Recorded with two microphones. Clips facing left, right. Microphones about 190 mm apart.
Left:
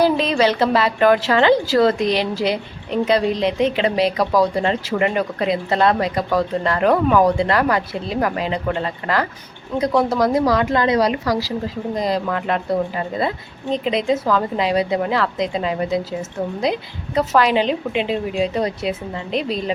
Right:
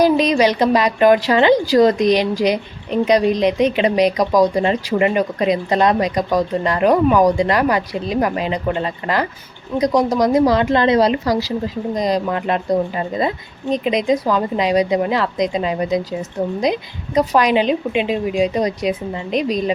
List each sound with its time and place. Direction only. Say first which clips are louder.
0.0 s a woman's voice: right 3 dB; 15° right (ahead or behind)